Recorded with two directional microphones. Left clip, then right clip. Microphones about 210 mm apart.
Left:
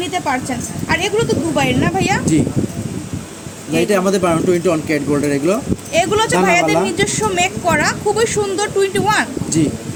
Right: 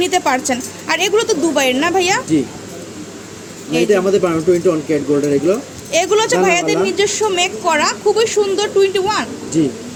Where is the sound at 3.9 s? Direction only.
50° left (ahead or behind).